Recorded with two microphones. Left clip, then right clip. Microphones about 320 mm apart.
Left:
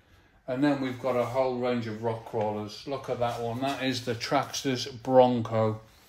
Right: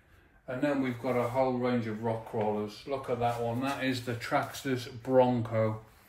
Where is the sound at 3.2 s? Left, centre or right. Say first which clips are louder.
Left 3 dB; left.